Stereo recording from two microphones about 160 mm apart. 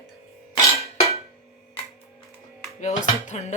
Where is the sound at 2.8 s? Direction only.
45° left (ahead or behind).